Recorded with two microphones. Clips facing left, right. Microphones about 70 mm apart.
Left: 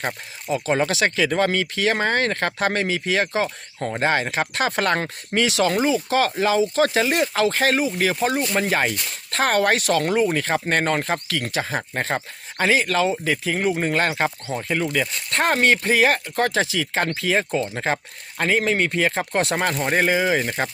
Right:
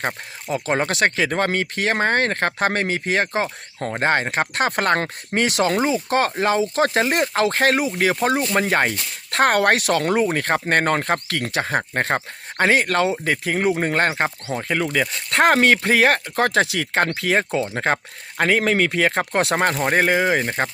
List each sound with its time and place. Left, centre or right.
0.5 s speech: right
14.1 s speech: right
14.5 s speech: right
15.3 s speech: right
19.7 s speech: right